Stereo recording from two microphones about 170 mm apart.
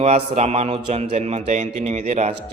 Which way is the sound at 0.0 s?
40° right (ahead or behind).